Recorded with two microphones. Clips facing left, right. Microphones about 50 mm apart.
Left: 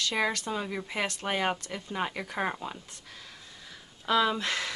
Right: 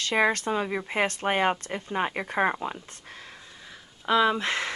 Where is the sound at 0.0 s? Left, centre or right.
Right.